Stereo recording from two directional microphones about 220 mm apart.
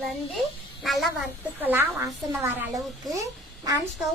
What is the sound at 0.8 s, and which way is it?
A child's voice, centre (ahead or behind).